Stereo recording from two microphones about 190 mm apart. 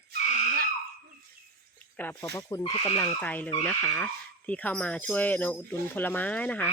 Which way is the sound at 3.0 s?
10° left (ahead or behind).